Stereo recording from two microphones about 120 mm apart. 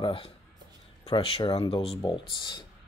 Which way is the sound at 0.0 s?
50° left (ahead or behind).